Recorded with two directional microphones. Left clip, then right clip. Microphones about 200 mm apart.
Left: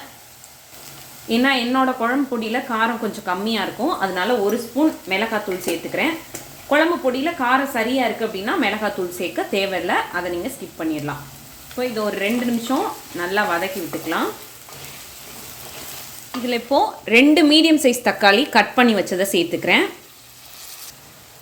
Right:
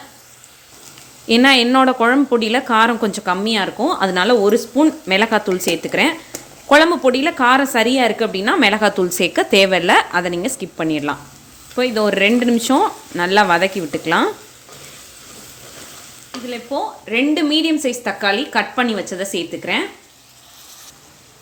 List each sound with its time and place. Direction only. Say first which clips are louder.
1.3 s a woman's voice: right 7 dB; 50° right (ahead or behind)
4.1 s a woman's voice: right 6 dB; 55° right (ahead or behind)
16.5 s a woman's voice: left 5 dB; 20° left (ahead or behind)